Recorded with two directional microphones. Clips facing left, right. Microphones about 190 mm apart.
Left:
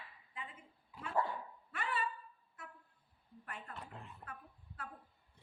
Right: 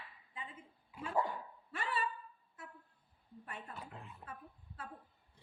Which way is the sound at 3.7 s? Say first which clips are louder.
Right 1 dB; centre (ahead or behind).